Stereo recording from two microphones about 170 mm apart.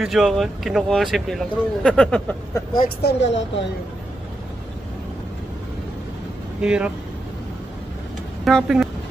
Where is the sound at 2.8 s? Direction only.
70° left (ahead or behind); by 3.6 s 90° left.